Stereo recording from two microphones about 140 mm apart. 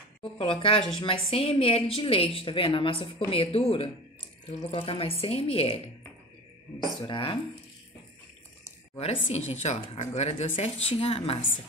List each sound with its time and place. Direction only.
0.2 s a woman's voice: 40° left (ahead or behind)
7.0 s a woman's voice: 35° left (ahead or behind)
8.9 s a woman's voice: 50° left (ahead or behind)